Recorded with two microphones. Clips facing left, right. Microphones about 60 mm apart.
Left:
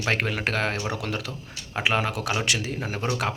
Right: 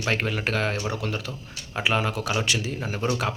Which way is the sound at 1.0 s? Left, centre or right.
Left.